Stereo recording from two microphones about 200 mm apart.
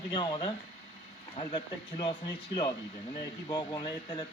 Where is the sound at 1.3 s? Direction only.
25° left (ahead or behind).